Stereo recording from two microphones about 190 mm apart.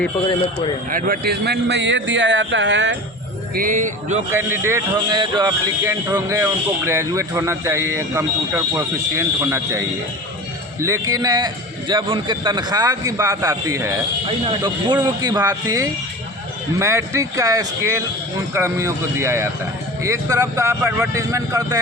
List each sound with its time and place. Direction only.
0.9 s speech: 45° right (ahead or behind); by 3.0 s 70° right (ahead or behind)
3.5 s music: 45° right (ahead or behind)
4.3 s a man's voice: 10° right (ahead or behind)
14.3 s a man's voice: 25° right (ahead or behind)